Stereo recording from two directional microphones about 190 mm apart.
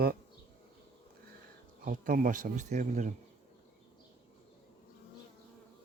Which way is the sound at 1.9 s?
45° right (ahead or behind).